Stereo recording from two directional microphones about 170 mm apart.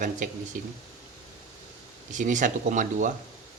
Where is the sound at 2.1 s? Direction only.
50° right (ahead or behind).